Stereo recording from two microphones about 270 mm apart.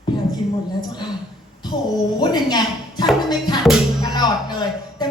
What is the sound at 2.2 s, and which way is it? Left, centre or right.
Speech, centre.